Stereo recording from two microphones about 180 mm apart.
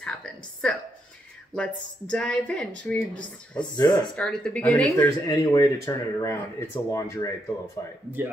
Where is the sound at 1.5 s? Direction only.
5° left (ahead or behind).